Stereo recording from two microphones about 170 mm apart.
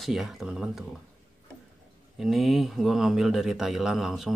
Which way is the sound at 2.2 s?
Centre (ahead or behind).